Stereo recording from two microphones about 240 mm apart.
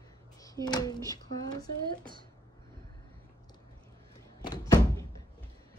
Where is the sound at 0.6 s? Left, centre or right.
Centre.